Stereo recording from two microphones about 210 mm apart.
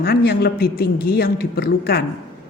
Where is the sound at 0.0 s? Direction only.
45° left (ahead or behind).